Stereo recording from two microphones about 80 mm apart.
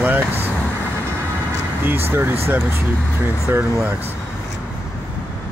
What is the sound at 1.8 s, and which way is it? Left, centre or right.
Speech, right.